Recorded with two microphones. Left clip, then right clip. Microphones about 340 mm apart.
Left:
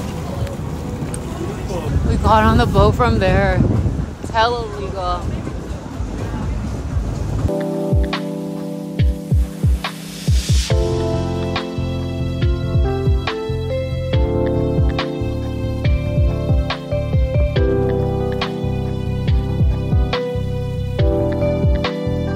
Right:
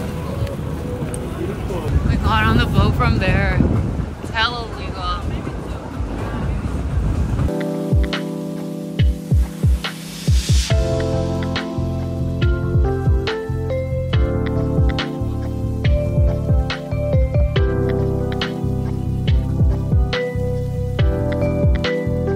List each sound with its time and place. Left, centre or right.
2.0 s speech: centre